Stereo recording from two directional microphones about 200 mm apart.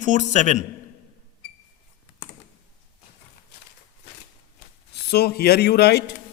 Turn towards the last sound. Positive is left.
turn(degrees=55)  # may be behind; listen again after turning